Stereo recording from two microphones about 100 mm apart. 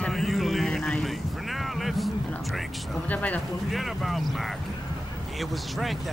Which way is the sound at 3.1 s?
15° left (ahead or behind).